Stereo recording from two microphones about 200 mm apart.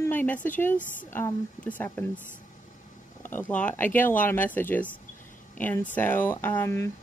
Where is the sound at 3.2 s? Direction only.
10° left (ahead or behind).